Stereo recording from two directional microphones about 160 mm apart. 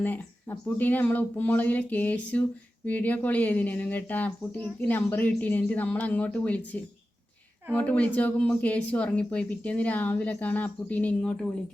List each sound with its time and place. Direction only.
0.0 s speech: 10° left (ahead or behind)